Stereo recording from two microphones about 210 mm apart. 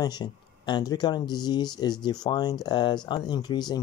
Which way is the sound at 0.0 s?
20° left (ahead or behind).